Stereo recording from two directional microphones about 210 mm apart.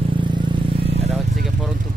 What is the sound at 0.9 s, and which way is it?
Vehicle, 30° right (ahead or behind).